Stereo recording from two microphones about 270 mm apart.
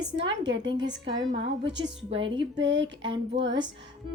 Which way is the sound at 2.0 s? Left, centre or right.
Centre.